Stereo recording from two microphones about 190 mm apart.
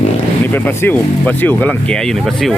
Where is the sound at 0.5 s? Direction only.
10° left (ahead or behind).